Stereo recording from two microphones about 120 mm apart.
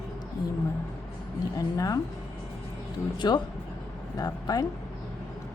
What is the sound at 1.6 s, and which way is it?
Speech, 30° left (ahead or behind).